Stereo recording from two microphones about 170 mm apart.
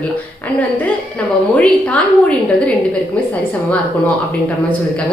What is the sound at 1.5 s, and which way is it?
Speech, 5° left (ahead or behind).